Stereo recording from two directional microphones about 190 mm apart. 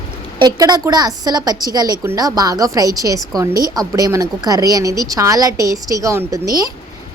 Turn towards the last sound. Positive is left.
turn(degrees=-15)  # may be behind; listen again after turning